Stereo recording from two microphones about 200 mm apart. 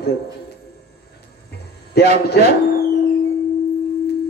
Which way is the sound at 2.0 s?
55° left (ahead or behind).